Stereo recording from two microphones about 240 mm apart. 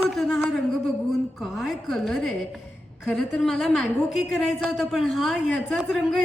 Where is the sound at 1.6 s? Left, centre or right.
Centre.